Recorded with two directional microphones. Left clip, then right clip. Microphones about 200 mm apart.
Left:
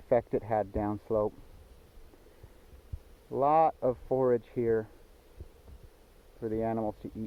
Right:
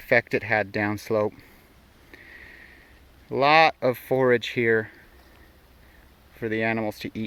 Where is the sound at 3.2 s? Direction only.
20° right (ahead or behind).